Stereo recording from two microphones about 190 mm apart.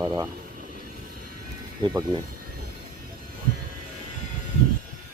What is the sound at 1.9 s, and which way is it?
Speech, 20° right (ahead or behind).